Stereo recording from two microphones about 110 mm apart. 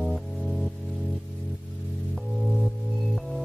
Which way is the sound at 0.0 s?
Centre (ahead or behind).